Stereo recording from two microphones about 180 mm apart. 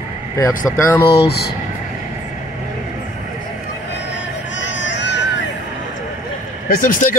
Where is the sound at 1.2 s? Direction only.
60° left (ahead or behind).